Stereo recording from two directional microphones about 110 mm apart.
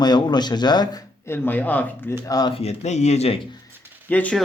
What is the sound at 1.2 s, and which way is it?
Speech, 20° left (ahead or behind).